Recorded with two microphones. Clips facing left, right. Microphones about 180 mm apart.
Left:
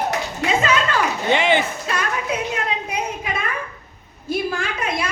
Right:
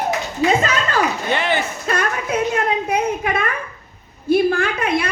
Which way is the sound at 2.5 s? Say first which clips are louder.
Right 6 dB; 55° right (ahead or behind).